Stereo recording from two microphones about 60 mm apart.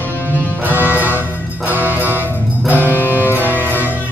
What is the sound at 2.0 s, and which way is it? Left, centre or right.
Music, left.